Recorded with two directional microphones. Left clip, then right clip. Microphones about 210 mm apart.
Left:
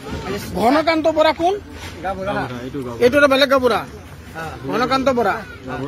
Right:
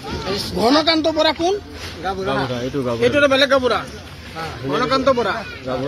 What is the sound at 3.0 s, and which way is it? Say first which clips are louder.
Speech: left 2 dB; 55° left (ahead or behind).